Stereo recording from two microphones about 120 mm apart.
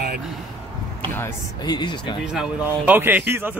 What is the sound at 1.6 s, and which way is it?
Speech, 35° left (ahead or behind).